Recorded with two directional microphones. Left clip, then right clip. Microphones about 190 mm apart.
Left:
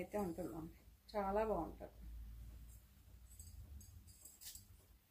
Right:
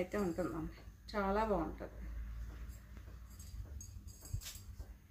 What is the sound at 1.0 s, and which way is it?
Speech, 20° right (ahead or behind).